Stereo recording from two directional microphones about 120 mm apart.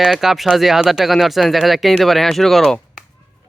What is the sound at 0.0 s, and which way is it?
Speech, centre (ahead or behind).